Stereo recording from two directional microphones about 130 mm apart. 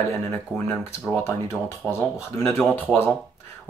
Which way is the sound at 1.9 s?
20° left (ahead or behind).